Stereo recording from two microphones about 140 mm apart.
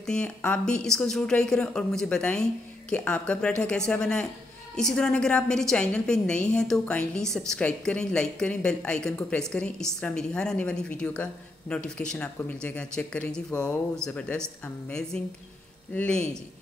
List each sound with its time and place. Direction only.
0.0 s a woman's voice: 10° left (ahead or behind)